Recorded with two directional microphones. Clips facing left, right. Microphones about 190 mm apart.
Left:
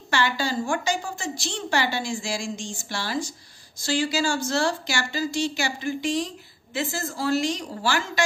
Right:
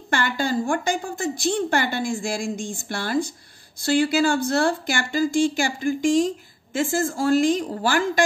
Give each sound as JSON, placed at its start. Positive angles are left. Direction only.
{"t": 0.1, "sound": "a woman's voice", "side_deg": -55}